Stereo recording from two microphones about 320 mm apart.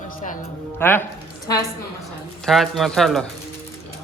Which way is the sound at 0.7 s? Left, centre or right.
Centre.